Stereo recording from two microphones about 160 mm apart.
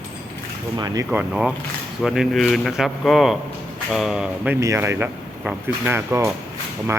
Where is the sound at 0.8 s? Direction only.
25° right (ahead or behind).